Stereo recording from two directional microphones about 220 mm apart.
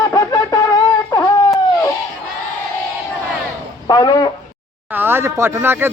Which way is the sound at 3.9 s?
20° left (ahead or behind).